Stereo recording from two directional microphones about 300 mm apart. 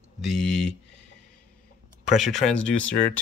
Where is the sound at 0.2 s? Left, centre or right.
Centre.